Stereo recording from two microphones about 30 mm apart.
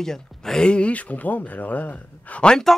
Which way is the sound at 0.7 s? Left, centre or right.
Left.